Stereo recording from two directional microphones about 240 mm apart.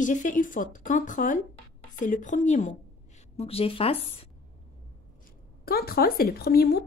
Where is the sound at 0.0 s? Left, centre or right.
Left.